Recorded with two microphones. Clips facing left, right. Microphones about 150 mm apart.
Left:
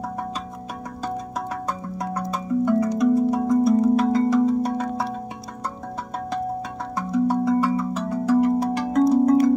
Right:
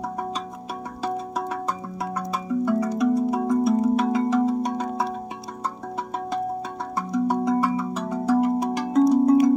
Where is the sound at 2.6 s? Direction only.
10° right (ahead or behind).